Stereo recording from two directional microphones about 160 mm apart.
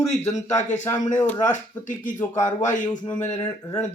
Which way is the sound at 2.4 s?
50° left (ahead or behind).